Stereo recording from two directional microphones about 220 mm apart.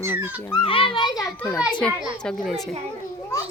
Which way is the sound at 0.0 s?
10° right (ahead or behind).